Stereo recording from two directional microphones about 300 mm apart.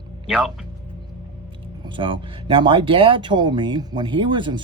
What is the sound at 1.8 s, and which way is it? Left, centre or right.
Speech, centre.